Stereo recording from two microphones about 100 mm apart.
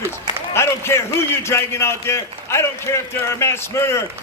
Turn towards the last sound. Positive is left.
turn(degrees=25)  # may be behind; listen again after turning